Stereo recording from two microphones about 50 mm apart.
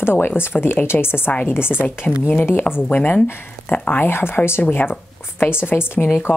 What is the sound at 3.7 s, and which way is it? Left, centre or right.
A woman's voice, left.